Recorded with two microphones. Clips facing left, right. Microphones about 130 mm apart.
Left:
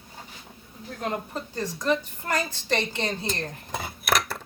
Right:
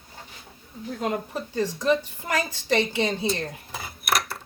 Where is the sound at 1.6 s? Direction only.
10° right (ahead or behind).